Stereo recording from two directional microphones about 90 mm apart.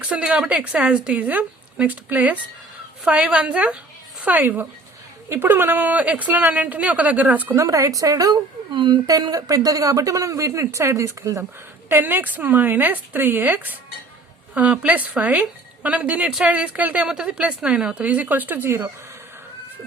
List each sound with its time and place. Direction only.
0.0 s a woman's voice: 15° right (ahead or behind)
7.5 s speech: 35° right (ahead or behind)
8.7 s speech: 55° right (ahead or behind)
9.3 s speech: 40° right (ahead or behind)
11.9 s speech: 20° right (ahead or behind)